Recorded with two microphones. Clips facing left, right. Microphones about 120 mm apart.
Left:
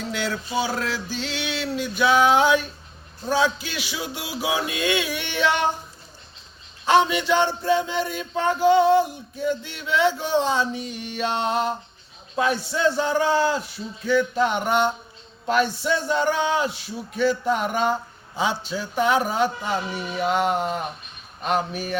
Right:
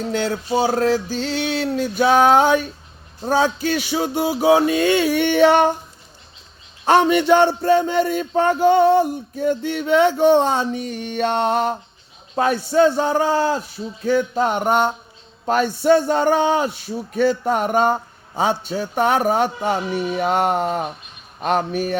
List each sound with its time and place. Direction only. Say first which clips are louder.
0.0 s a man's voice: right 5 dB; 45° right (ahead or behind)
6.8 s a man's voice: right 4 dB; 50° right (ahead or behind)